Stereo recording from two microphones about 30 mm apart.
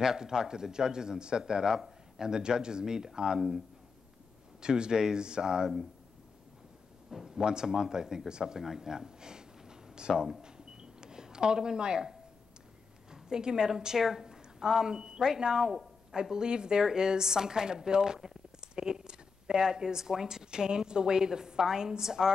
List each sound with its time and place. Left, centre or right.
0.0 s a woman's voice: centre
4.6 s a woman's voice: right
7.2 s a woman's voice: right
8.5 s speech: centre
10.4 s a sound: right
13.1 s a woman's voice: right